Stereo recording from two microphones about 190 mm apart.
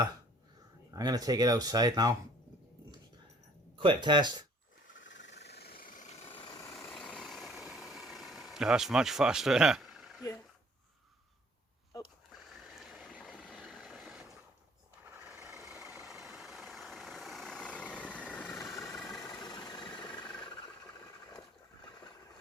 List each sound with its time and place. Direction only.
0.9 s speech: 20° right (ahead or behind)
3.8 s speech: 25° right (ahead or behind)
4.9 s vehicle: 75° left (ahead or behind); by 6.3 s 35° left (ahead or behind)
6.4 s vehicle: 20° left (ahead or behind)
6.7 s vehicle: centre (ahead or behind)
11.9 s sniff: 20° left (ahead or behind)
12.5 s vehicle: centre (ahead or behind)
15.4 s vehicle: 5° right (ahead or behind); by 18.7 s 10° left (ahead or behind)
19.2 s engine: 25° left (ahead or behind)
20.4 s a sound: 25° left (ahead or behind)
21.0 s vehicle: 20° left (ahead or behind)